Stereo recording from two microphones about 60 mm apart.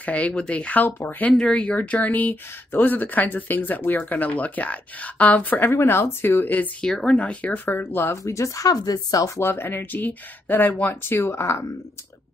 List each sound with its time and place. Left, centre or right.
0.0 s speech: left
1.3 s speech: centre
5.7 s speech: left
6.8 s speech: centre; by 8.0 s left
8.2 s speech: left
9.4 s speech: left